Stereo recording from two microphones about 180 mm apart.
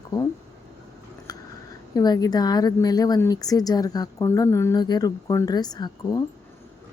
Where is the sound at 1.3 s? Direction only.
20° left (ahead or behind).